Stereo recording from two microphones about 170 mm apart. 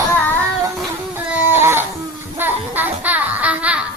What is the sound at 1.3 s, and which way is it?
Baby cry, 15° right (ahead or behind).